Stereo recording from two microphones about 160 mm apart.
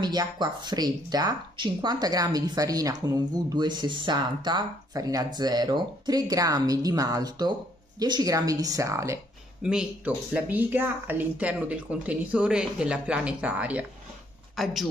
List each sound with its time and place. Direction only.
0.0 s speech: 25° right (ahead or behind)
9.6 s speech: 5° right (ahead or behind)